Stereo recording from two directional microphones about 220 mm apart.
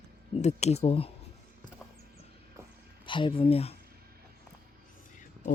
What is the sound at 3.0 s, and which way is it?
Speech, 20° left (ahead or behind).